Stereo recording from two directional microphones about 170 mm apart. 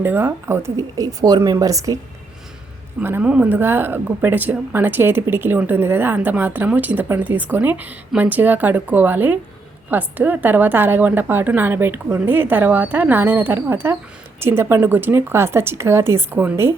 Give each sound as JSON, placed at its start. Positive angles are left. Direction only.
{"t": 0.0, "sound": "speech", "side_deg": -15}
{"t": 3.0, "sound": "speech", "side_deg": -10}